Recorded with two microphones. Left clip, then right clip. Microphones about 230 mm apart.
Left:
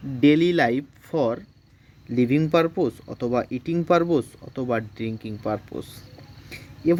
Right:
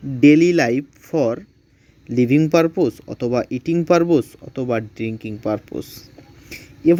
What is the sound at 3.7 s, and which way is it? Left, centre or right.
Speech, centre.